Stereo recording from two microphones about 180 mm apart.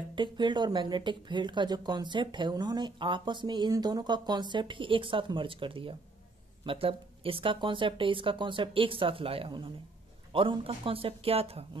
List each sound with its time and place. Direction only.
0.1 s speech: 25° right (ahead or behind)